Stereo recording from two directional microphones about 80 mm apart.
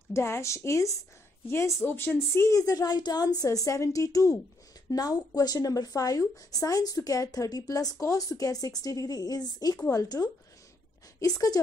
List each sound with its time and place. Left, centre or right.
0.1 s speech: left
2.5 s speech: left